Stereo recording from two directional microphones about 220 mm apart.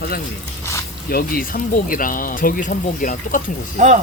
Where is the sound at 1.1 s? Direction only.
45° left (ahead or behind).